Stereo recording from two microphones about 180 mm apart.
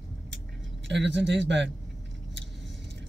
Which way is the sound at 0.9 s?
80° right.